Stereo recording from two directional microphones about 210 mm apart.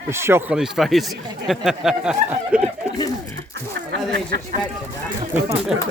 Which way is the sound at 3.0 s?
15° left (ahead or behind).